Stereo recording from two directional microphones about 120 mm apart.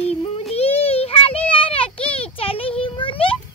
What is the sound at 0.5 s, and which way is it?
Child singing, 55° left (ahead or behind).